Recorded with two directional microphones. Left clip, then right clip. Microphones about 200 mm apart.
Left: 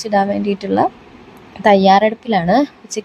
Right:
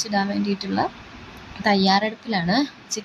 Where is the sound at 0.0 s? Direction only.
35° left (ahead or behind).